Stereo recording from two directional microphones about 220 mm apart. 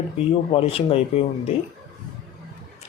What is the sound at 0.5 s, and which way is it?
Speech, 25° left (ahead or behind).